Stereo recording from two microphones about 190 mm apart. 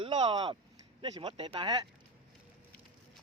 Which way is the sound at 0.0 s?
25° right (ahead or behind).